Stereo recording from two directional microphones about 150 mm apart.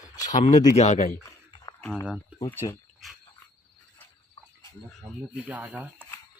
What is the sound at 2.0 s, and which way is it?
Speech, 10° right (ahead or behind).